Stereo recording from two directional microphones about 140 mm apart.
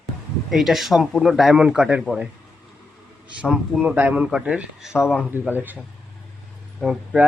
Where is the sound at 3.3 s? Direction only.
5° right (ahead or behind).